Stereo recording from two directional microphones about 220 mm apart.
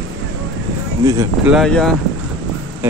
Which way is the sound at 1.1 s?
15° right (ahead or behind).